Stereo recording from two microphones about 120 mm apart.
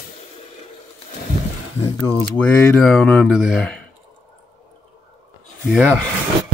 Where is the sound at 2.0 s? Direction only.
10° left (ahead or behind).